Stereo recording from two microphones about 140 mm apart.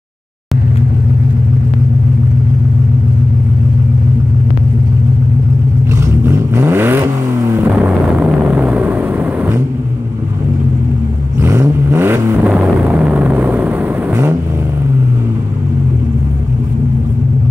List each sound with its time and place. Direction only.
6.2 s vehicle: 15° right (ahead or behind)
11.3 s vehicle: 20° right (ahead or behind)
12.4 s vehicle: 10° right (ahead or behind)